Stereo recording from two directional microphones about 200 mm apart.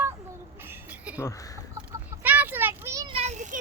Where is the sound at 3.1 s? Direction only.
35° right (ahead or behind).